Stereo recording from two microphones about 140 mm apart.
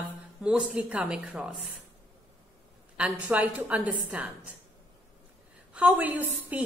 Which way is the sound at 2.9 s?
10° right (ahead or behind).